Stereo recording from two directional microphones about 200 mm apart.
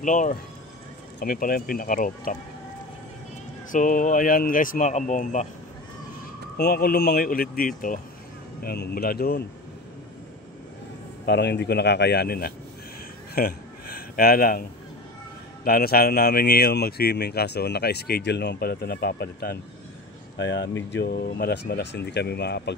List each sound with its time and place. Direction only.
0.0 s a man's voice: 40° left (ahead or behind)
3.7 s speech: 40° left (ahead or behind)
6.5 s a man's voice: 50° left (ahead or behind)
11.2 s speech: 60° left (ahead or behind)
13.3 s a sound: 50° left (ahead or behind)
15.6 s a man's voice: 50° left (ahead or behind)
20.3 s speech: 65° left (ahead or behind)
20.9 s speech: 55° left (ahead or behind)